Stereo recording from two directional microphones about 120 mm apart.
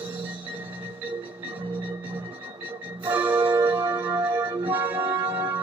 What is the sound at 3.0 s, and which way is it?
Music, 15° right (ahead or behind).